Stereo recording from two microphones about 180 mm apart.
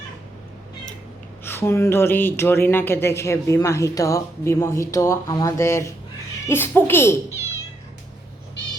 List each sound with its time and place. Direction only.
1.5 s speech: 15° left (ahead or behind)